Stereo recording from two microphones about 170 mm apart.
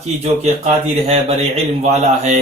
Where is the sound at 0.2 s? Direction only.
40° right (ahead or behind).